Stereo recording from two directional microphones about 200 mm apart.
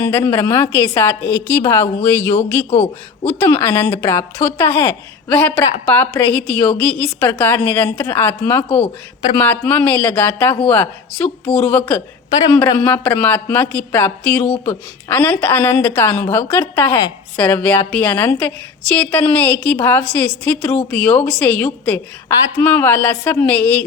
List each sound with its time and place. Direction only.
0.0 s a woman's voice: 10° left (ahead or behind)
2.6 s a man's voice: 30° left (ahead or behind)
3.2 s a woman's voice: 10° left (ahead or behind)
12.8 s a woman's voice: 10° left (ahead or behind)